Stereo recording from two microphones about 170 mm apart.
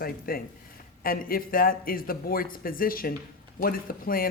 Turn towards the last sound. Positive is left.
turn(degrees=60)  # may be behind; listen again after turning